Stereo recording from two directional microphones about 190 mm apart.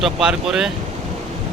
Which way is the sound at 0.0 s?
5° right (ahead or behind).